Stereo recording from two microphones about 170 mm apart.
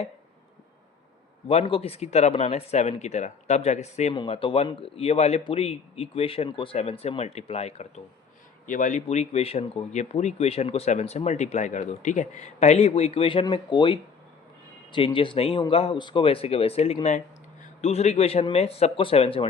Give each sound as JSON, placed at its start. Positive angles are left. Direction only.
{"t": 1.5, "sound": "speech", "side_deg": 35}
{"t": 4.1, "sound": "speech", "side_deg": 30}
{"t": 8.6, "sound": "speech", "side_deg": 50}